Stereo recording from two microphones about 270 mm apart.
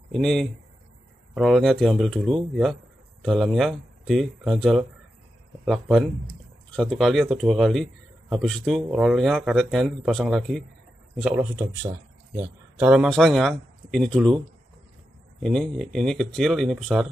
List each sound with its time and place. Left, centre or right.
0.1 s a man's voice: centre
15.4 s speech: centre